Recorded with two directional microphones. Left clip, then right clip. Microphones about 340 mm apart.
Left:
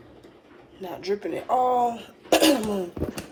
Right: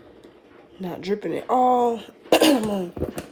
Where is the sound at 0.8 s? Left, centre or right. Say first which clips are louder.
Right 1 dB; right.